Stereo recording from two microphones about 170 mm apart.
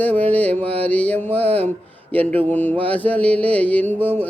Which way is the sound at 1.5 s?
10° left (ahead or behind).